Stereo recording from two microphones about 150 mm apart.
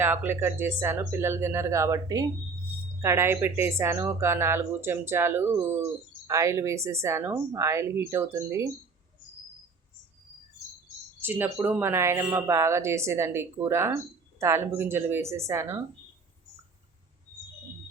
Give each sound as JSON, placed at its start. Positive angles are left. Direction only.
{"t": 0.0, "sound": "a woman's voice", "side_deg": -15}
{"t": 11.2, "sound": "a woman's voice", "side_deg": -15}